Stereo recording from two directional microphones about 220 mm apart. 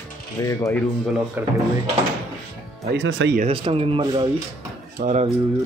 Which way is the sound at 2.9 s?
60° right (ahead or behind).